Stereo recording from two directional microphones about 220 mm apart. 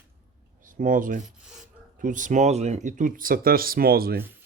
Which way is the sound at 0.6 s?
35° right (ahead or behind).